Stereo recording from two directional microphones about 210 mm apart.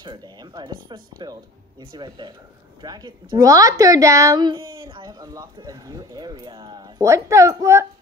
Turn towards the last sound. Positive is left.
turn(degrees=-15)  # may be behind; listen again after turning